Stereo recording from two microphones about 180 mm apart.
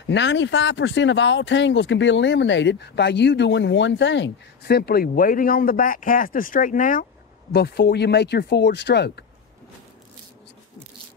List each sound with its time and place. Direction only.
0.1 s speech: 80° left; by 7.1 s 50° left (ahead or behind)
7.5 s speech: 60° left (ahead or behind)